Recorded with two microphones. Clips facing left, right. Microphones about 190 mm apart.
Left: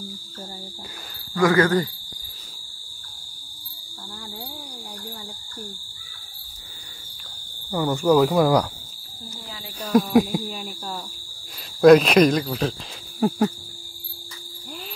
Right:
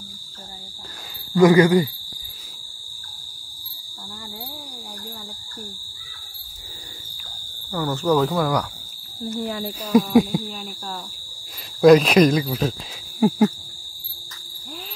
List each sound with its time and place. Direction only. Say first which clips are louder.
1.3 s speech: right 5 dB; 20° right (ahead or behind)
7.7 s speech: left 2 dB; 15° left (ahead or behind)
9.8 s cricket: right 1 dB; centre (ahead or behind)